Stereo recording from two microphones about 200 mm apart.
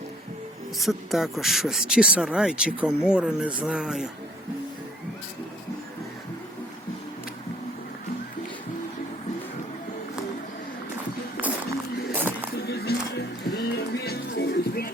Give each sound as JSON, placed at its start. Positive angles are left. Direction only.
{"t": 0.8, "sound": "speech", "side_deg": 0}
{"t": 12.1, "sound": "a sound", "side_deg": -10}
{"t": 12.5, "sound": "music", "side_deg": 55}